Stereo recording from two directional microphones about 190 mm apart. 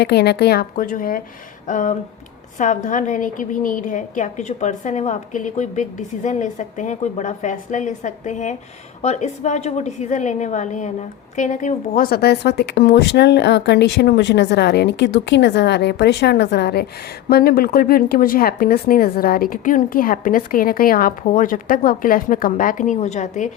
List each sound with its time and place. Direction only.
0.0 s a woman's voice: 60° left (ahead or behind); by 23.5 s 40° left (ahead or behind)